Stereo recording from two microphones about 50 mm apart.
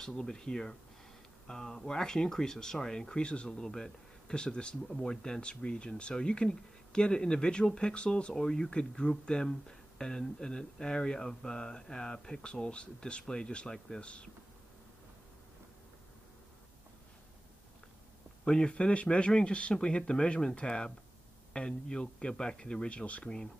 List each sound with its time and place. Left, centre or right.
0.0 s speech: centre
18.4 s speech: centre